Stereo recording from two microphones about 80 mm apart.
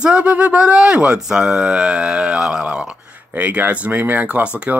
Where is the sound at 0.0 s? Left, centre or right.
Centre.